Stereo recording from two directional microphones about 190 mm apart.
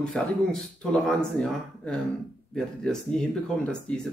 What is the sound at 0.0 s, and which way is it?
Speech, 5° left (ahead or behind).